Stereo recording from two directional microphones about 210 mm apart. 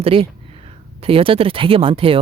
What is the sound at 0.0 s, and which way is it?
Speech, 25° right (ahead or behind).